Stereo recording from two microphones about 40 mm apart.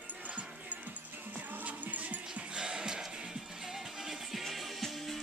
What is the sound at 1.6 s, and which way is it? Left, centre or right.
Music, right.